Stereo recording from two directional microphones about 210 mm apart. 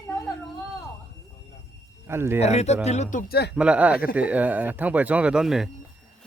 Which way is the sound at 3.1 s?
45° left (ahead or behind).